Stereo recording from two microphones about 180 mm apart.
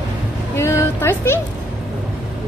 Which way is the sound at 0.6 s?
15° left (ahead or behind).